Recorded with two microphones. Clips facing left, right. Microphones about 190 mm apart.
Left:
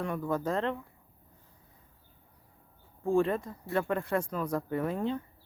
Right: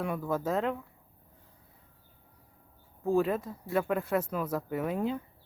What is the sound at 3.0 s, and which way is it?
Speech, 5° right (ahead or behind).